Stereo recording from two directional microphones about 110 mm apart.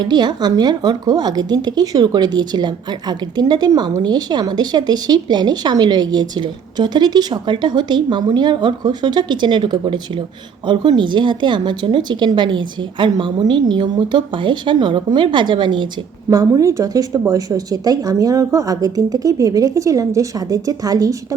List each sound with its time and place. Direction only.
0.0 s a woman's voice: 40° right (ahead or behind)
16.3 s speech: 35° right (ahead or behind)